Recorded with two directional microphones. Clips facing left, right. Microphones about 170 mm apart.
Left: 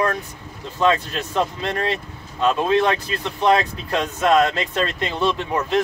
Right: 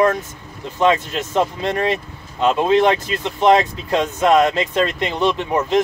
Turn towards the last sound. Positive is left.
turn(degrees=-20)  # may be behind; listen again after turning